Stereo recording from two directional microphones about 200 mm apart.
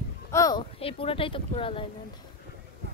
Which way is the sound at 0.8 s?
30° left (ahead or behind).